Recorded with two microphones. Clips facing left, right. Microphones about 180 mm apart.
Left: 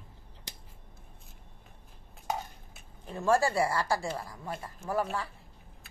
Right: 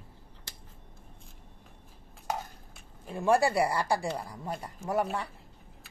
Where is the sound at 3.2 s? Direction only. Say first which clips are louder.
Right 1 dB; 15° right (ahead or behind).